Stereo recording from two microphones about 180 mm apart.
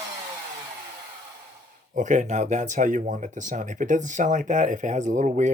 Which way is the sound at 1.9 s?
45° right (ahead or behind).